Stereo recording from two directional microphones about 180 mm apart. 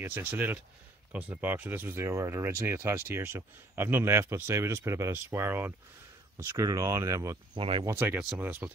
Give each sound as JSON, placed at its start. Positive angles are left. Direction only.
{"t": 0.0, "sound": "speech", "side_deg": -10}
{"t": 7.5, "sound": "speech", "side_deg": -30}
{"t": 7.8, "sound": "speech", "side_deg": -10}